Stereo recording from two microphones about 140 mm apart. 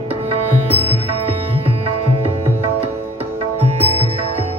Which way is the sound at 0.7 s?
45° right (ahead or behind).